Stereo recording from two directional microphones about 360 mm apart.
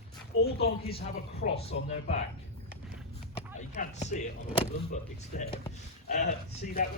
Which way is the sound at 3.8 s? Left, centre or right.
Centre.